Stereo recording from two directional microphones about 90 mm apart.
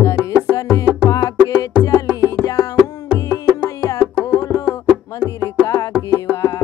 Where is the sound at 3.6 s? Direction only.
40° left (ahead or behind).